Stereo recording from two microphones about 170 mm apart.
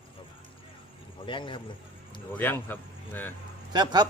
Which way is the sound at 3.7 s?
25° right (ahead or behind).